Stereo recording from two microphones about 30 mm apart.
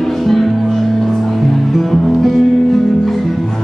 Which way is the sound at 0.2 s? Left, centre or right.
Centre.